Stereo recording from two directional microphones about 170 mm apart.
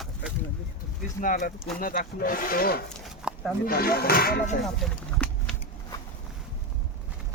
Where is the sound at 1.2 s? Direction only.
50° left (ahead or behind).